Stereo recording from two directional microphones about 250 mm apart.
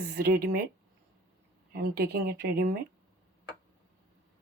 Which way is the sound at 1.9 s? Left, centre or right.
Right.